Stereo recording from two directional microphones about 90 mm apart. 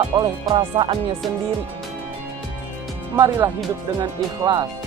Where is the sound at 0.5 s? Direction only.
80° right.